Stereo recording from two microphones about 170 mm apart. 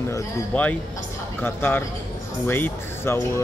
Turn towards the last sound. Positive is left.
turn(degrees=15)  # may be behind; listen again after turning